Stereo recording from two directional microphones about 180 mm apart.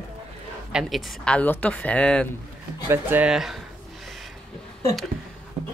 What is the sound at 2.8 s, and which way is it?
Speech, 10° right (ahead or behind).